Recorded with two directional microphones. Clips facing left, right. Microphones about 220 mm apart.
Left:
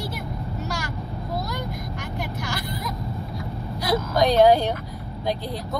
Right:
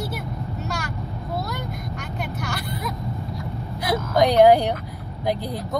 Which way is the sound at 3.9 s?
20° right (ahead or behind).